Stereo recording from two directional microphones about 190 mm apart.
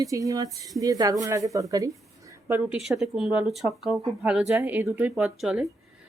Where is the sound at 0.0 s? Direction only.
15° right (ahead or behind).